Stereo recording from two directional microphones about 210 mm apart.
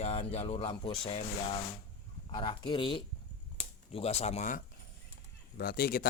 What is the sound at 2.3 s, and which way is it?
Speech, 25° left (ahead or behind).